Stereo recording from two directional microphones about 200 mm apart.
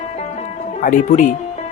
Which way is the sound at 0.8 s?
40° left (ahead or behind).